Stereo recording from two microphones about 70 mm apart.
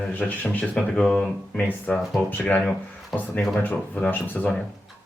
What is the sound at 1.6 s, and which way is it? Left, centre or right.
Speech, left.